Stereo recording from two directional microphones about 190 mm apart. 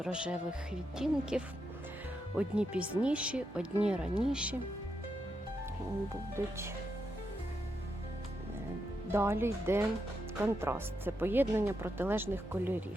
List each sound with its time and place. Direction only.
0.0 s speech: 5° right (ahead or behind)
6.4 s speech: 10° right (ahead or behind)
9.1 s speech: 15° right (ahead or behind)